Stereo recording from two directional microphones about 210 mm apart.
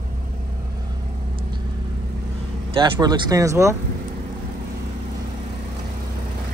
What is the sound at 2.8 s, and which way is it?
Speech, 20° right (ahead or behind).